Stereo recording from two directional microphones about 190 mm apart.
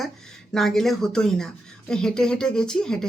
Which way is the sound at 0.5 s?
Centre (ahead or behind).